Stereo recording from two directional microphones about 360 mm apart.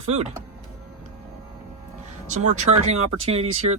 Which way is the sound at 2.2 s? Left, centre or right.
Centre.